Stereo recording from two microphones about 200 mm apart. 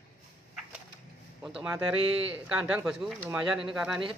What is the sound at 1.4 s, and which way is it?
Speech, 5° right (ahead or behind).